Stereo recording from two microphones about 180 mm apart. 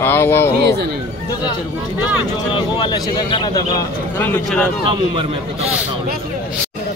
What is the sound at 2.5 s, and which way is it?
Speech, 25° left (ahead or behind).